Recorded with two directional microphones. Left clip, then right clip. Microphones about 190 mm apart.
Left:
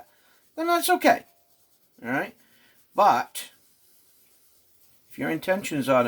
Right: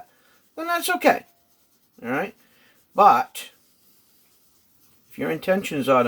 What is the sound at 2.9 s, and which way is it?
Speech, 25° right (ahead or behind).